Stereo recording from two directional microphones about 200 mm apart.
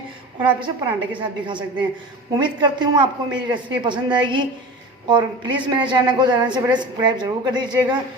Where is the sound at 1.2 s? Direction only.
25° right (ahead or behind).